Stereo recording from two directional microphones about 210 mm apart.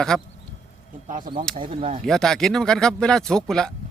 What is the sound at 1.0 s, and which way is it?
Speech, 40° right (ahead or behind).